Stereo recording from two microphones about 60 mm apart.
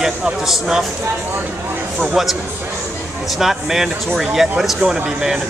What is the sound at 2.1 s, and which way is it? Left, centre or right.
Speech, centre.